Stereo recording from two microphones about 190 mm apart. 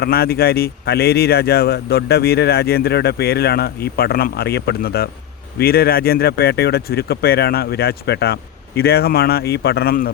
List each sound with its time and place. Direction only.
0.0 s speech: 55° left (ahead or behind)